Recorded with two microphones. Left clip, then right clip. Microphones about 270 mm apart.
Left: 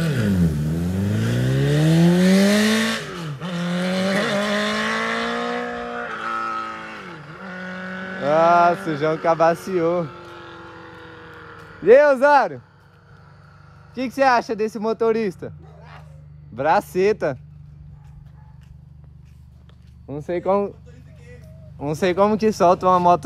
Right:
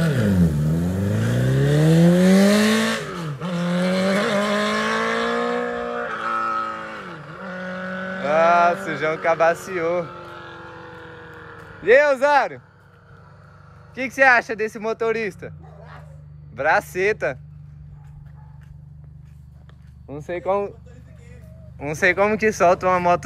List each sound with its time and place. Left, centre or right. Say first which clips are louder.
0.0 s vehicle: right 2 dB; centre
8.3 s vehicle: left 1 dB; left
9.2 s a sound: left 1 dB; left
10.0 s vehicle: right 1 dB; centre
11.9 s speech: left 2 dB; left
13.9 s speech: right 2 dB; left
14.6 s speech: left 2 dB; left
14.9 s speech: left 3 dB; left
16.9 s speech: left 2 dB; left
20.1 s speech: left 2 dB; left
22.0 s speech: right 1 dB; left